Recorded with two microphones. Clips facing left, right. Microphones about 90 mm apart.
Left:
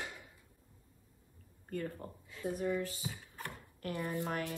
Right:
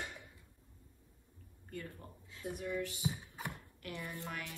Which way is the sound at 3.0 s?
15° right (ahead or behind).